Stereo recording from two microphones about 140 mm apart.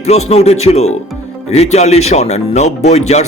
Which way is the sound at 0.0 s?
50° left (ahead or behind).